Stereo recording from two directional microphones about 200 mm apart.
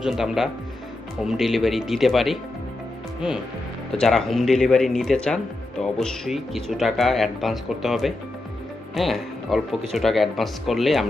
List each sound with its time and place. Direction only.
0.0 s speech: centre (ahead or behind)